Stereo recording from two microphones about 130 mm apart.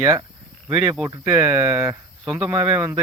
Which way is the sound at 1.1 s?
20° right (ahead or behind).